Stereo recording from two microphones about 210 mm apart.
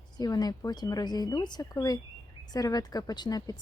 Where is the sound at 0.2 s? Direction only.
20° left (ahead or behind).